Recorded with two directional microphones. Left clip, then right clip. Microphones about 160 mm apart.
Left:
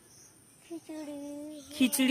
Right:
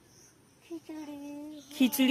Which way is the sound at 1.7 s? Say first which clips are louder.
Right 1 dB; 5° right (ahead or behind).